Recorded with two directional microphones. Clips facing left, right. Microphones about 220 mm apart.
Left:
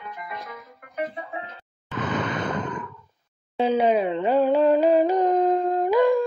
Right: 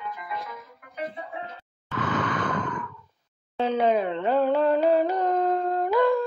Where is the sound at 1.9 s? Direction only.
20° left (ahead or behind).